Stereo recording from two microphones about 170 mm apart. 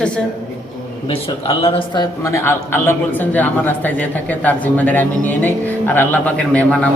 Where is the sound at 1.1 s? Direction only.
35° left (ahead or behind).